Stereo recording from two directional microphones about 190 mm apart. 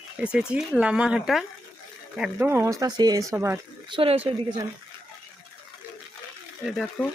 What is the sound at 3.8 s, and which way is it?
Speech, 25° right (ahead or behind).